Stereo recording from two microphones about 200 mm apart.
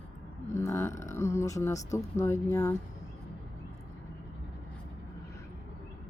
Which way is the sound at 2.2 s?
15° left (ahead or behind).